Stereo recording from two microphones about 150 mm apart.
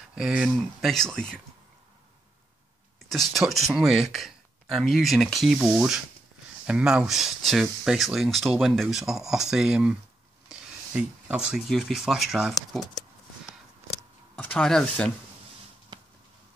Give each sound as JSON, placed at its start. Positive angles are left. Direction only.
{"t": 0.1, "sound": "speech", "side_deg": -5}
{"t": 3.1, "sound": "speech", "side_deg": 0}
{"t": 14.3, "sound": "speech", "side_deg": 10}
{"t": 15.9, "sound": "a sound", "side_deg": -30}